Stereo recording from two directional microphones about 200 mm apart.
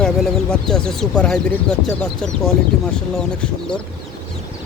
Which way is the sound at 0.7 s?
5° left (ahead or behind).